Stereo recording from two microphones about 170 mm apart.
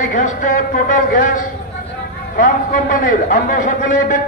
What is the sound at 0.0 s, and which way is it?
A man's voice, 50° left (ahead or behind).